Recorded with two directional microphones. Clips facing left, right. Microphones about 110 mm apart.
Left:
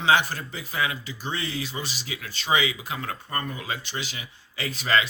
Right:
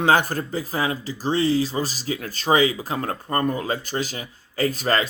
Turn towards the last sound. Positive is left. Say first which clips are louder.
# right 4 dB
turn(degrees=-40)  # may be behind; listen again after turning